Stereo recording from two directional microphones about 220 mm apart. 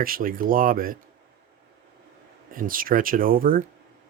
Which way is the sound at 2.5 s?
40° right (ahead or behind).